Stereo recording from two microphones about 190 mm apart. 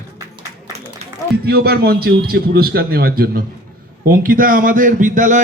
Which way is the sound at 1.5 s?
55° right (ahead or behind).